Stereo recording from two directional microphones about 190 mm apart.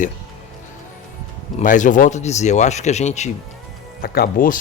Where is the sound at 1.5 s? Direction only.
40° left (ahead or behind).